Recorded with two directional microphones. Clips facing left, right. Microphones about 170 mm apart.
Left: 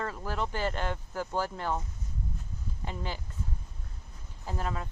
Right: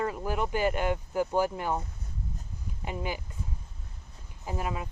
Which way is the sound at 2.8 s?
15° right (ahead or behind).